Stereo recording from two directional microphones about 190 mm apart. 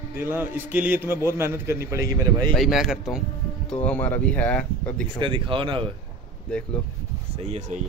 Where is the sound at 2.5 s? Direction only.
Centre (ahead or behind).